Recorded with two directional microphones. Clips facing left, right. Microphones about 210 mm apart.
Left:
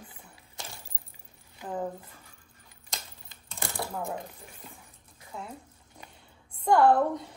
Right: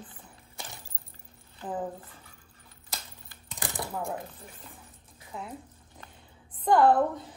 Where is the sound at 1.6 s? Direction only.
10° left (ahead or behind).